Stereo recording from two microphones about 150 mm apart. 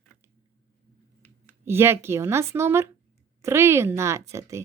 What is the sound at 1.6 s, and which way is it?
A woman's voice, 15° right (ahead or behind).